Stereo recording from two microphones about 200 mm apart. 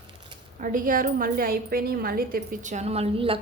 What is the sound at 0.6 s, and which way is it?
A woman's voice, 40° right (ahead or behind).